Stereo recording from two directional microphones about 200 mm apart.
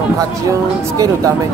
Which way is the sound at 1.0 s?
15° right (ahead or behind).